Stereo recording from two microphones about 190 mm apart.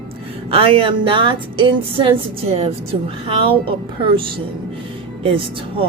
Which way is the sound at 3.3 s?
30° right (ahead or behind).